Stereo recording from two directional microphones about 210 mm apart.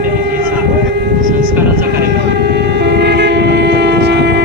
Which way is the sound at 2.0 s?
50° right (ahead or behind).